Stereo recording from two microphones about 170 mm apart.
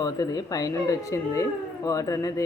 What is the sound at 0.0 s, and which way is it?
Speech, 20° left (ahead or behind).